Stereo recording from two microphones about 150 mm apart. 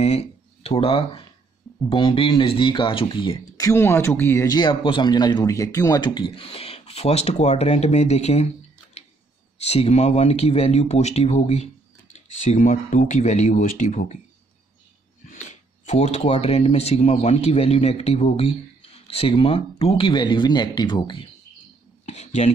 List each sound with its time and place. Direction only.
0.0 s speech: 45° left (ahead or behind)
3.6 s speech: 15° left (ahead or behind)
4.6 s speech: 30° left (ahead or behind)
9.7 s speech: 45° left (ahead or behind)
15.2 s speech: 50° left (ahead or behind); by 21.3 s 30° left (ahead or behind)
22.0 s speech: 45° left (ahead or behind)